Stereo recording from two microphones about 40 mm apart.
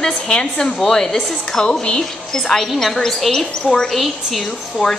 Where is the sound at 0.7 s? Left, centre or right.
Centre.